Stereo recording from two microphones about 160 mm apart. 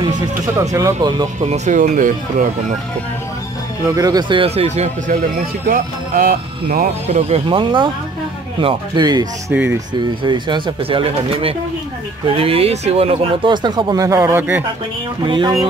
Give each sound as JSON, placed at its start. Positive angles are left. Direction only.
{"t": 0.6, "sound": "speech", "side_deg": -20}
{"t": 1.4, "sound": "speech", "side_deg": -45}
{"t": 3.8, "sound": "speech", "side_deg": -25}
{"t": 5.7, "sound": "speech", "side_deg": -60}
{"t": 7.1, "sound": "speech", "side_deg": -40}
{"t": 9.5, "sound": "speech", "side_deg": -10}
{"t": 9.9, "sound": "speech", "side_deg": -30}
{"t": 15.2, "sound": "speech", "side_deg": -30}